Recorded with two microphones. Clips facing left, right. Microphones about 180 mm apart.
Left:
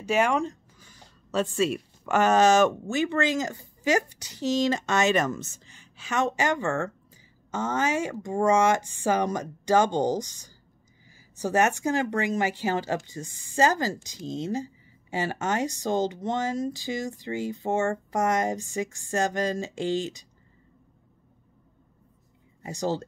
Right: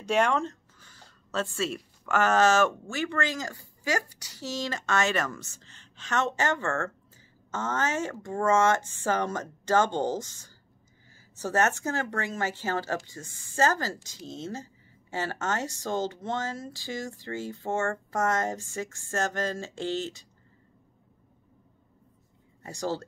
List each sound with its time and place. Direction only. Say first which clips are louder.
0.0 s speech: left 1 dB; 5° left (ahead or behind)
22.6 s speech: left 3 dB; 20° left (ahead or behind)